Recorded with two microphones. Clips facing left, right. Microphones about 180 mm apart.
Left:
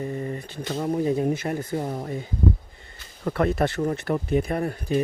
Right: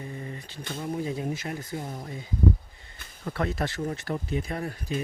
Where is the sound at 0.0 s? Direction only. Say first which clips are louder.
Left 8 dB; 45° left (ahead or behind).